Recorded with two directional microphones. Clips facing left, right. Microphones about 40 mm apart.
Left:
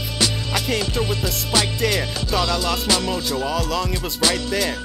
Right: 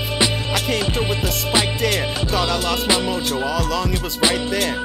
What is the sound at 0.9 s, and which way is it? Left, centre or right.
Music, right.